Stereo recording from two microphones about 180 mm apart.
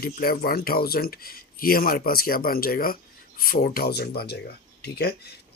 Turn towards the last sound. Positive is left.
turn(degrees=65)  # may be behind; listen again after turning